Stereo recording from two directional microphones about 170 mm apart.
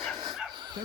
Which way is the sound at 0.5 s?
25° right (ahead or behind).